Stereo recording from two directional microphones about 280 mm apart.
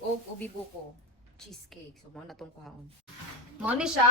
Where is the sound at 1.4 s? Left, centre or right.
Centre.